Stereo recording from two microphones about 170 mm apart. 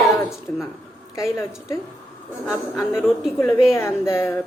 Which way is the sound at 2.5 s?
20° left (ahead or behind).